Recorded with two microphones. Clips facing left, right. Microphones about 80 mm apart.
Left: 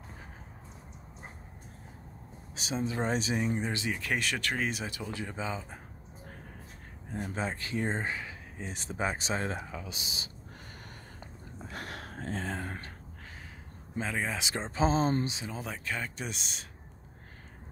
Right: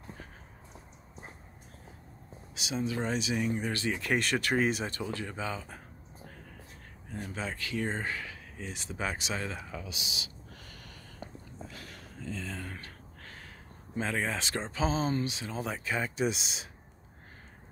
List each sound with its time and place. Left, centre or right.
2.5 s speech: left
3.9 s speech: centre
5.1 s speech: centre
7.1 s speech: left
11.7 s speech: left
13.9 s speech: centre
14.7 s speech: left
15.2 s speech: left
15.5 s speech: centre